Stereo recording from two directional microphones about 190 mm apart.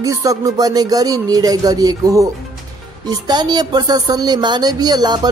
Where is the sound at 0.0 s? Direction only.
20° right (ahead or behind).